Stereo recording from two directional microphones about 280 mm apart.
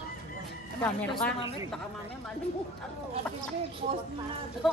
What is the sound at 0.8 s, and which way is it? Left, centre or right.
Speech, centre.